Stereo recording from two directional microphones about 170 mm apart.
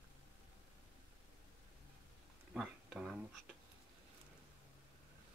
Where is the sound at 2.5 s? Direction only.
5° right (ahead or behind).